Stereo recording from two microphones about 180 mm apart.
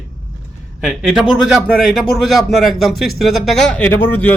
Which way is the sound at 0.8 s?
5° right (ahead or behind).